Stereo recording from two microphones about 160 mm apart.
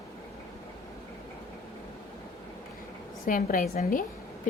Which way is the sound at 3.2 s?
60° left (ahead or behind).